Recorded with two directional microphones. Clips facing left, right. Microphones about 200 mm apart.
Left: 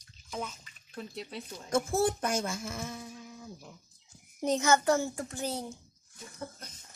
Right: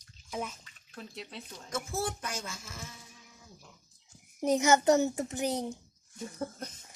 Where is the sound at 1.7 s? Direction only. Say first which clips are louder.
Left 7 dB; 50° left (ahead or behind).